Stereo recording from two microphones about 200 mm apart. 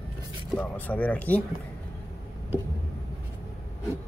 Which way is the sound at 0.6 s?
10° left (ahead or behind).